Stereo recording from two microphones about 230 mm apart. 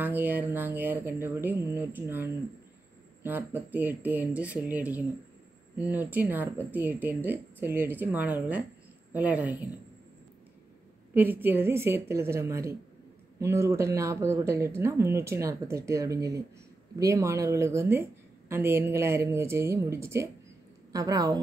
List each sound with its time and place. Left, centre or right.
0.0 s speech: centre
3.3 s speech: centre
11.1 s speech: centre